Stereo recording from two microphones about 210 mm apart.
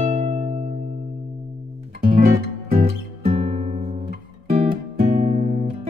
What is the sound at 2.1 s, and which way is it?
Music, 30° right (ahead or behind).